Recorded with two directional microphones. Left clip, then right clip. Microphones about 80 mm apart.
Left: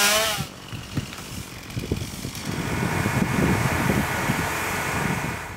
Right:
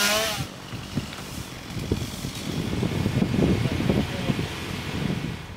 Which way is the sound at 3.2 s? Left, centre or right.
Left.